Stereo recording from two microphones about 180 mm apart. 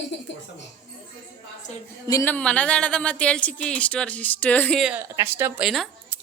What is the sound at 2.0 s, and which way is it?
Speech, 15° left (ahead or behind).